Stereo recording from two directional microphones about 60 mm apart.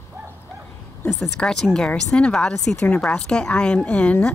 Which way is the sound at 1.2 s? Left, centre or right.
Centre.